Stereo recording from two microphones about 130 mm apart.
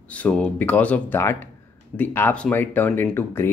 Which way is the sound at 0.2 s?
10° left (ahead or behind).